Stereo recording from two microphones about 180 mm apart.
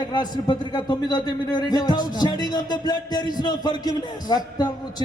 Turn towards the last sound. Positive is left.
turn(degrees=20)  # may be behind; listen again after turning